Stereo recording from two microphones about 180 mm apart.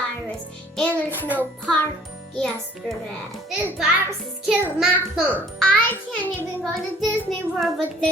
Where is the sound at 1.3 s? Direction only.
10° left (ahead or behind).